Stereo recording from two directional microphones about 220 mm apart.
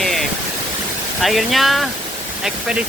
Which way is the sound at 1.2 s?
Centre (ahead or behind).